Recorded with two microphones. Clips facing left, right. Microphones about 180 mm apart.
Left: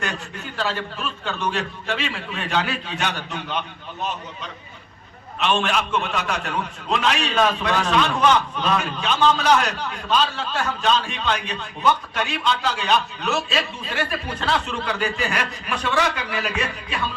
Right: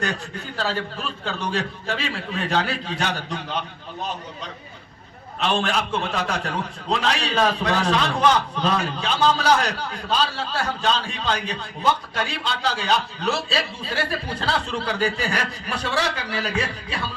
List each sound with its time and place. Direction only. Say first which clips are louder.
0.0 s a man's voice: right 2 dB; 40° right (ahead or behind)
5.4 s a man's voice: left 1 dB; 35° right (ahead or behind)